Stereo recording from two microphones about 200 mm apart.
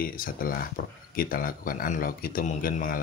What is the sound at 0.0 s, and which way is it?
Speech, 45° left (ahead or behind).